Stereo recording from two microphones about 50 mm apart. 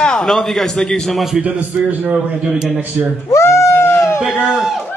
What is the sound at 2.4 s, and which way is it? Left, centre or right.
Speech, centre.